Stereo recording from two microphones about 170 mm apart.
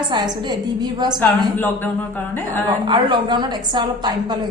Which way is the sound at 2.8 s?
25° right (ahead or behind).